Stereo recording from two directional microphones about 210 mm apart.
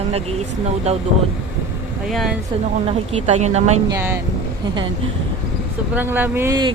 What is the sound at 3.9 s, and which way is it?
Speech, 10° right (ahead or behind).